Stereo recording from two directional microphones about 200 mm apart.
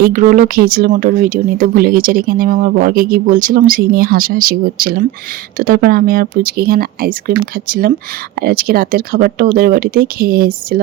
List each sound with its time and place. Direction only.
0.0 s speech: 40° right (ahead or behind)